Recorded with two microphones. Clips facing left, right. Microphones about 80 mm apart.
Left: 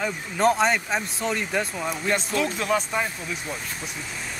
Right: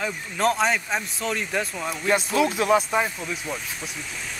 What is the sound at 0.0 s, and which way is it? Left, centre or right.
Speech, centre.